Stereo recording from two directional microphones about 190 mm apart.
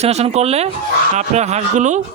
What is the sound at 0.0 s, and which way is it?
Speech, 35° right (ahead or behind).